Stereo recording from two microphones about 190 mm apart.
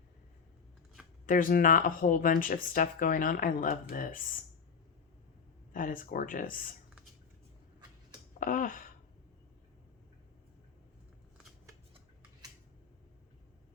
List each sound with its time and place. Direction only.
1.3 s speech: 45° left (ahead or behind)
5.7 s speech: 45° left (ahead or behind)
8.4 s speech: 45° left (ahead or behind)